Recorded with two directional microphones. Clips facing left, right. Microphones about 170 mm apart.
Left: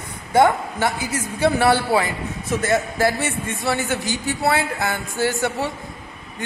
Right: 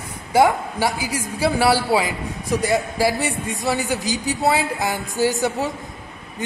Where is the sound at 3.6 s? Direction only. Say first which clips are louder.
Even; 15° right (ahead or behind).